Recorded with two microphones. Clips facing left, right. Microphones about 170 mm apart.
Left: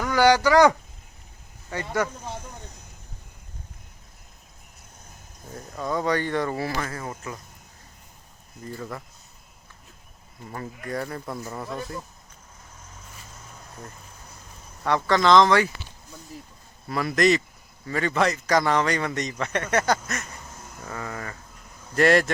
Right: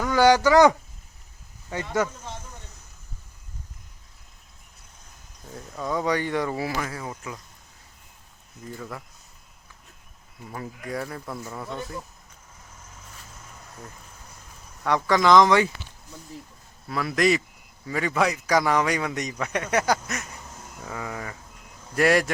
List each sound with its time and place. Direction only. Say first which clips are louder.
0.0 s speech: right 1 dB; 20° right (ahead or behind)
5.9 s a man's voice: even; 10° right (ahead or behind)
8.6 s speech: left 2 dB; centre (ahead or behind)
10.5 s speech: left 1 dB; 5° right (ahead or behind)
14.9 s a man's voice: even; 10° right (ahead or behind)
16.9 s a man's voice: left 1 dB; centre (ahead or behind)